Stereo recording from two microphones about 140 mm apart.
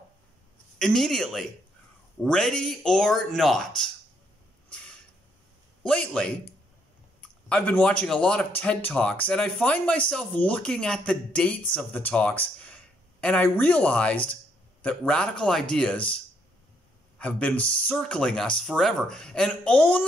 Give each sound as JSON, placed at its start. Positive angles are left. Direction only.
{"t": 0.7, "sound": "speech", "side_deg": 5}
{"t": 4.6, "sound": "a sound", "side_deg": 5}
{"t": 5.9, "sound": "speech", "side_deg": 10}
{"t": 17.2, "sound": "speech", "side_deg": 10}